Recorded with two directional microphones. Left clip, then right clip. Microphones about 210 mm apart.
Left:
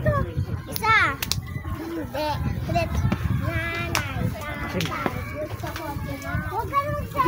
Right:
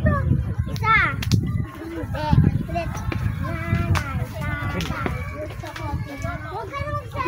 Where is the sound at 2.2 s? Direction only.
55° left (ahead or behind).